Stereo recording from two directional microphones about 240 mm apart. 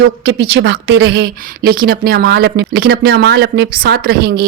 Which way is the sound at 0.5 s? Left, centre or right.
Right.